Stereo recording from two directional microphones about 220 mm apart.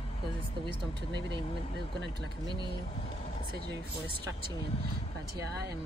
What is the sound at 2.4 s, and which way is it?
Speech, 20° right (ahead or behind).